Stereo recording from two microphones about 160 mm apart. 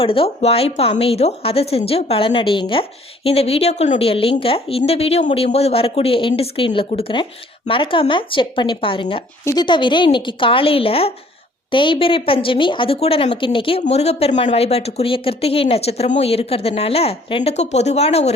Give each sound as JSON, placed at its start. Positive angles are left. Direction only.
{"t": 0.0, "sound": "a woman's voice", "side_deg": 35}
{"t": 9.4, "sound": "a woman's voice", "side_deg": 20}
{"t": 9.6, "sound": "a woman's voice", "side_deg": 30}